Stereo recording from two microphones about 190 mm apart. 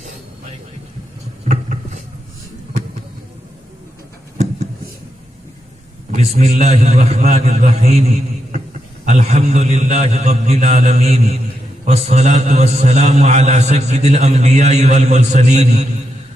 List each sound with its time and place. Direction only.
6.1 s a man's voice: 35° right (ahead or behind)
9.0 s a man's voice: 35° right (ahead or behind)